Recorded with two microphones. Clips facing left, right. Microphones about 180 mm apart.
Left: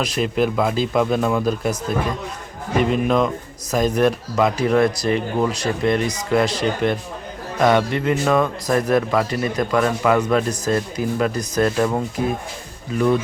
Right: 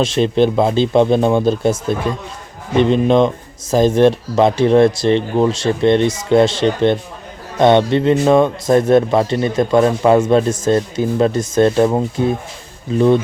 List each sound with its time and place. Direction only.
0.0 s a man's voice: 25° right (ahead or behind)